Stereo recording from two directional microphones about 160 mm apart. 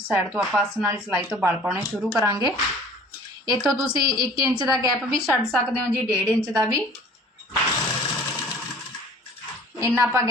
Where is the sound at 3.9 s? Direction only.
25° right (ahead or behind).